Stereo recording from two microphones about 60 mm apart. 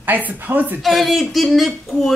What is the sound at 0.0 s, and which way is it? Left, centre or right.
Speech, right.